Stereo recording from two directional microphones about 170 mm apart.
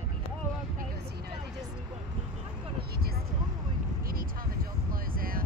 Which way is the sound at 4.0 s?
60° right (ahead or behind).